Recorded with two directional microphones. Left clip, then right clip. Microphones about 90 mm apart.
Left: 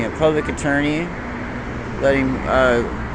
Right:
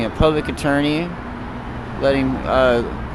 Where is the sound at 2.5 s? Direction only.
40° right (ahead or behind).